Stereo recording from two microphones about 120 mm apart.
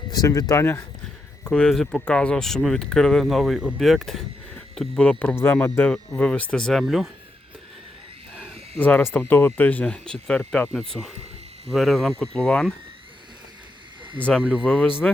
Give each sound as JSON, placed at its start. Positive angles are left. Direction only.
{"t": 0.1, "sound": "speech", "side_deg": 30}
{"t": 1.5, "sound": "speech", "side_deg": 10}
{"t": 8.8, "sound": "speech", "side_deg": 15}
{"t": 11.7, "sound": "speech", "side_deg": 0}
{"t": 14.4, "sound": "speech", "side_deg": -10}
{"t": 15.0, "sound": "speech", "side_deg": 10}